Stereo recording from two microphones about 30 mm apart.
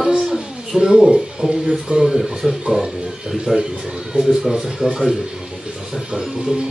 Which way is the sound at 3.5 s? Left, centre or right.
Centre.